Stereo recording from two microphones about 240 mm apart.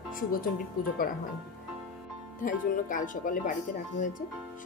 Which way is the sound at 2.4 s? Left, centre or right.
Left.